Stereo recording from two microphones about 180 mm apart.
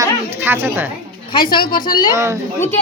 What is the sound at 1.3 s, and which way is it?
Speech, 25° left (ahead or behind).